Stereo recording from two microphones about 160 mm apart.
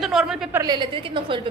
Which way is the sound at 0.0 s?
5° right (ahead or behind).